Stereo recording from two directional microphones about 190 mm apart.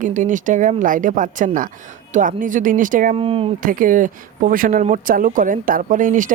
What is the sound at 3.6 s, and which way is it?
Speech, 45° right (ahead or behind).